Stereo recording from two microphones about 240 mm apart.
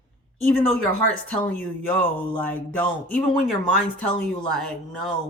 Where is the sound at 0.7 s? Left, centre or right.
Right.